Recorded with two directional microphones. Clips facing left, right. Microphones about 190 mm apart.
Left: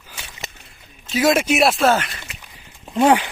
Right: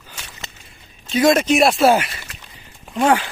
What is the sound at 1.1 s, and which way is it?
Speech, 5° left (ahead or behind).